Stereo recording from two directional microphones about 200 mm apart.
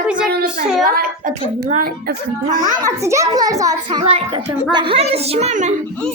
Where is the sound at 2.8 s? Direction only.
15° right (ahead or behind).